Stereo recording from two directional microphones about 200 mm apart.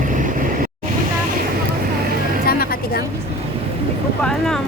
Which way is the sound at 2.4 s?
50° left (ahead or behind).